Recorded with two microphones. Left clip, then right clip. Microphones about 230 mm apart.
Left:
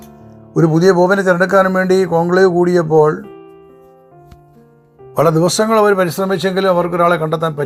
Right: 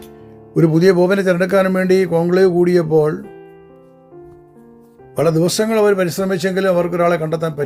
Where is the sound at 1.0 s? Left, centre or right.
Right.